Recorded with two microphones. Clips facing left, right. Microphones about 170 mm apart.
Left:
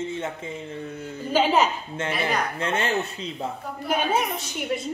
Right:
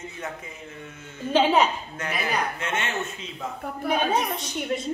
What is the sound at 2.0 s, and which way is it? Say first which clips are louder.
Speech: left 2 dB; 30° left (ahead or behind).